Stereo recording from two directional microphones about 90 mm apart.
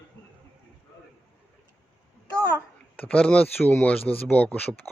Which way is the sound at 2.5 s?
15° left (ahead or behind).